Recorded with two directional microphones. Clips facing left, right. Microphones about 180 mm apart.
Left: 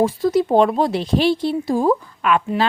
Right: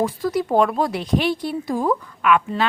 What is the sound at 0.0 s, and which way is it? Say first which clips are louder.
A woman's voice: left 5 dB; 25° left (ahead or behind).